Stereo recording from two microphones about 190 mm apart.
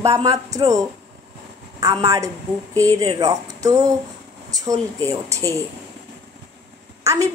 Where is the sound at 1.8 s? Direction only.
15° right (ahead or behind).